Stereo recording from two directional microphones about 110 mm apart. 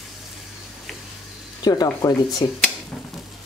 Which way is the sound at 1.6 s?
35° left (ahead or behind).